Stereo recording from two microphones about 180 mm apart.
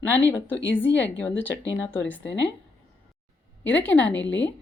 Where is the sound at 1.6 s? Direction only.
90° left.